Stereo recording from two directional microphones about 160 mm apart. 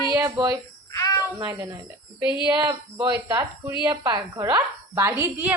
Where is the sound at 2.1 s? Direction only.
30° left (ahead or behind).